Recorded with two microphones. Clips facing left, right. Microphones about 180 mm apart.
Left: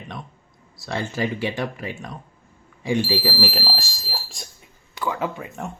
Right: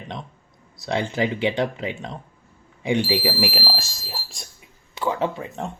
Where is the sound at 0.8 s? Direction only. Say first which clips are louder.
Right 3 dB; 20° right (ahead or behind).